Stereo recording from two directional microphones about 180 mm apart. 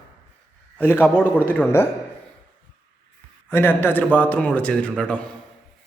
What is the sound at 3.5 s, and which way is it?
Speech, 10° left (ahead or behind).